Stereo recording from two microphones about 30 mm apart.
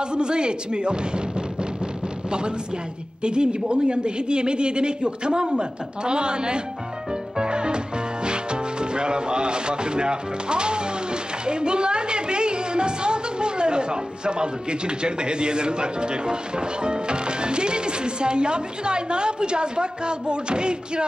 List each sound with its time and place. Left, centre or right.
0.0 s a man's voice: right
3.2 s a man's voice: right